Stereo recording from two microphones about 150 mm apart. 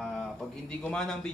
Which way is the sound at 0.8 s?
5° left (ahead or behind).